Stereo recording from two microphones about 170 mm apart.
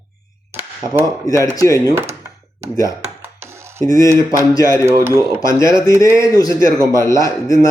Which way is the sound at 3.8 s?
20° left (ahead or behind).